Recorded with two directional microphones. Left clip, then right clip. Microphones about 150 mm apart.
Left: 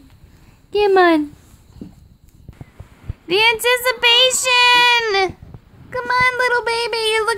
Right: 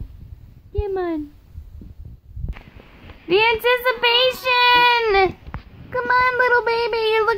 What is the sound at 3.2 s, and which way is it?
Child singing, 20° left (ahead or behind).